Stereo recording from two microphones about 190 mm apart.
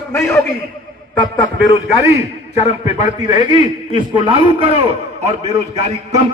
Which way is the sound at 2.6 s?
35° left (ahead or behind).